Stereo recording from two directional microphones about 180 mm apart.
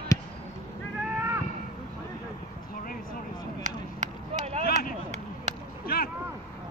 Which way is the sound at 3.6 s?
40° right (ahead or behind).